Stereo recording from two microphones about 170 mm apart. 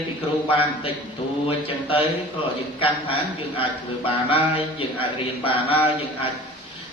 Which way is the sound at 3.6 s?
30° left (ahead or behind).